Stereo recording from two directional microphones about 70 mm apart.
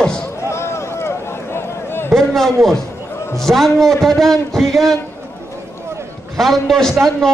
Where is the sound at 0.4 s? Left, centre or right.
Left.